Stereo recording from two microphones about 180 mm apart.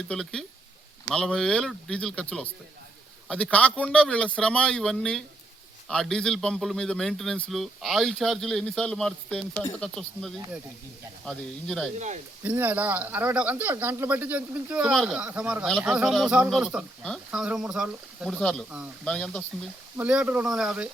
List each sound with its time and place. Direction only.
0.1 s a man's voice: 5° left (ahead or behind)
11.9 s speech: 40° right (ahead or behind)
12.4 s a man's voice: 10° right (ahead or behind)
20.0 s a man's voice: 5° right (ahead or behind)